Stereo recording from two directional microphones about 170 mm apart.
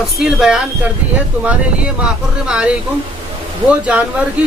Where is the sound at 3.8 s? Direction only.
10° right (ahead or behind).